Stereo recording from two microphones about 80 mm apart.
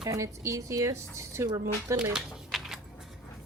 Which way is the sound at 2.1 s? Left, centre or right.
Centre.